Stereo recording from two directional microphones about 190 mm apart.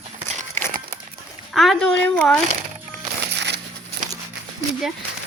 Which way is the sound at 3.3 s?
65° right (ahead or behind).